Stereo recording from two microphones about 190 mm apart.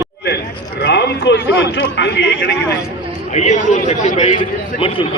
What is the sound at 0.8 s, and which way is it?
A man's voice, 60° left (ahead or behind).